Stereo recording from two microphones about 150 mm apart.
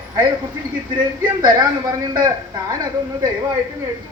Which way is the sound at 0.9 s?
25° right (ahead or behind).